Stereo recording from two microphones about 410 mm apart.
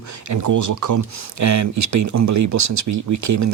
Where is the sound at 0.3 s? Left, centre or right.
Right.